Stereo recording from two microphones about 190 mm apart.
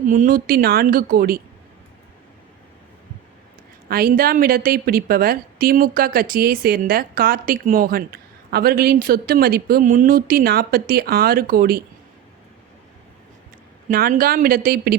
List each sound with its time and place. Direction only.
0.1 s a woman's voice: 45° right (ahead or behind)
3.8 s a woman's voice: 50° right (ahead or behind)
13.9 s a woman's voice: 50° right (ahead or behind)